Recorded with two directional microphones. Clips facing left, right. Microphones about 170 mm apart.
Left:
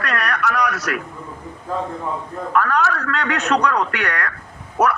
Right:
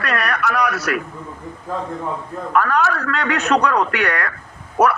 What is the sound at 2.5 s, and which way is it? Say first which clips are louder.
A man's voice: right 1 dB; 5° right (ahead or behind).